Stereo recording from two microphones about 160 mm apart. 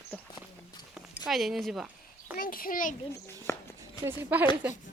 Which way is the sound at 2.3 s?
60° left (ahead or behind).